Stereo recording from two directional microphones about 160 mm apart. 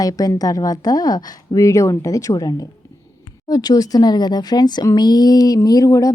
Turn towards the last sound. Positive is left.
turn(degrees=20)  # may be behind; listen again after turning